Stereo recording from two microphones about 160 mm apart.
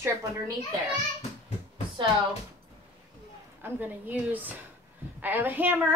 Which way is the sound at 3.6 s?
10° right (ahead or behind).